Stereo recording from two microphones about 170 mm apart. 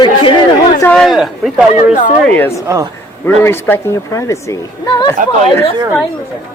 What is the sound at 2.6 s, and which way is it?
Speech, 20° right (ahead or behind).